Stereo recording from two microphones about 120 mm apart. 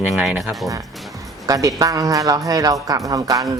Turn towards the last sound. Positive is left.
turn(degrees=-30)  # may be behind; listen again after turning